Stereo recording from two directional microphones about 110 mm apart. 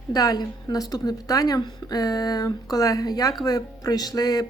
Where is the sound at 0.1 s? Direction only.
35° left (ahead or behind).